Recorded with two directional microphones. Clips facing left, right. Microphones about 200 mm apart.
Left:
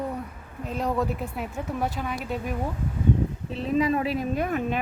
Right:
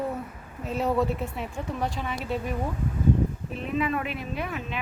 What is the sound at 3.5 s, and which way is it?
A woman's voice, 35° left (ahead or behind).